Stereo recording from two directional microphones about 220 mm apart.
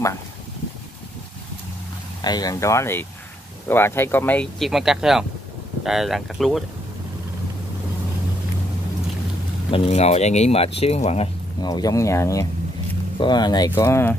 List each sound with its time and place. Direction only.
2.2 s speech: 20° left (ahead or behind); by 6.6 s centre (ahead or behind)
9.7 s speech: 25° left (ahead or behind)
11.7 s speech: 15° left (ahead or behind)